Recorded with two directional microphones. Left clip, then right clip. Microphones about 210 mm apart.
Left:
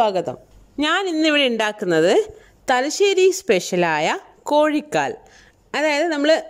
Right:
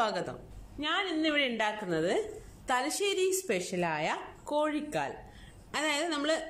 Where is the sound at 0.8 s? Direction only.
55° left (ahead or behind).